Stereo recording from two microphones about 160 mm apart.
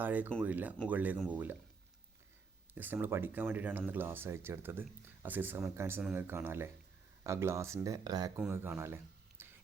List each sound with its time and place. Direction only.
0.0 s speech: 10° right (ahead or behind)
2.7 s speech: 10° right (ahead or behind)
8.4 s speech: 10° right (ahead or behind)
9.4 s whispering: 10° right (ahead or behind)